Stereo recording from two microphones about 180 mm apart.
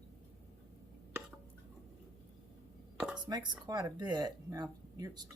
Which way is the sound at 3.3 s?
25° right (ahead or behind).